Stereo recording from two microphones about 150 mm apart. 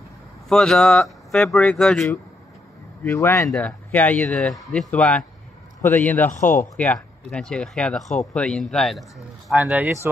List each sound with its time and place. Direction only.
0.5 s speech: 5° left (ahead or behind)
3.0 s speech: 15° left (ahead or behind)
3.4 s a man's voice: 10° left (ahead or behind)
6.3 s speech: 55° left (ahead or behind)
6.6 s speech: 10° left (ahead or behind); by 9.9 s 10° right (ahead or behind)